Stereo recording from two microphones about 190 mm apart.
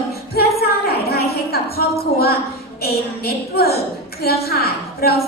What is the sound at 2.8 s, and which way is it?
A woman's voice, 55° left (ahead or behind).